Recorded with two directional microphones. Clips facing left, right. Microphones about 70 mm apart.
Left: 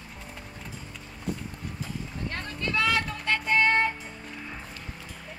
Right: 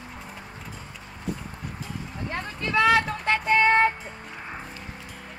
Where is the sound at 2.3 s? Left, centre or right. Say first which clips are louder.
Right 5 dB; centre.